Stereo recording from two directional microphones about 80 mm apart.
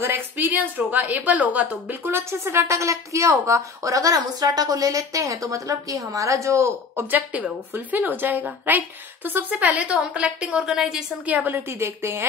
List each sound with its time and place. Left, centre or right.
0.0 s a woman's voice: right
7.1 s a woman's voice: right
11.2 s a woman's voice: right